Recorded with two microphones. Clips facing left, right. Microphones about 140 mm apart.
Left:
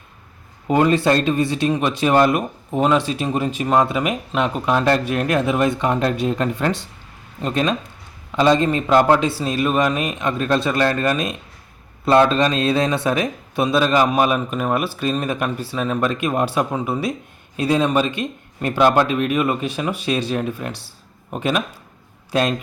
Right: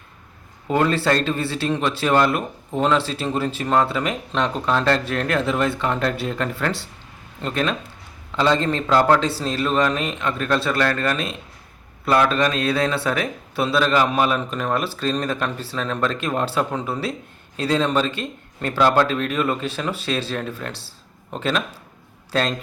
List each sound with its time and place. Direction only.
0.7 s speech: 15° left (ahead or behind)